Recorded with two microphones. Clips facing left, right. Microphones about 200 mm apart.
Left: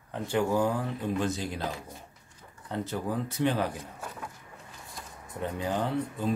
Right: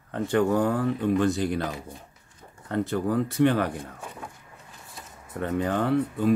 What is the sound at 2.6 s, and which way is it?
Speech, 65° right (ahead or behind).